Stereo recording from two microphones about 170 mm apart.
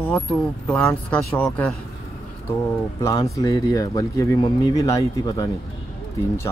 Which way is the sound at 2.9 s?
15° left (ahead or behind).